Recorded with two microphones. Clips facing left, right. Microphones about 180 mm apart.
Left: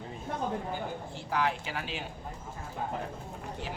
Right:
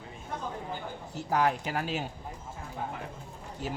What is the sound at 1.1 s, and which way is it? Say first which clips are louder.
Speech: right 5 dB; 40° right (ahead or behind).